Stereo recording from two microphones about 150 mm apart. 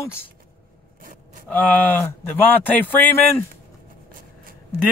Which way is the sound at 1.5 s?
10° left (ahead or behind).